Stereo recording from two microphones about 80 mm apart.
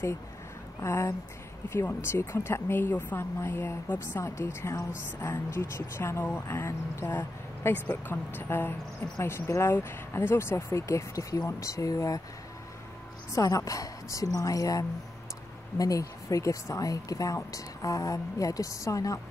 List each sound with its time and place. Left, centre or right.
0.7 s a woman's voice: left
13.3 s a woman's voice: left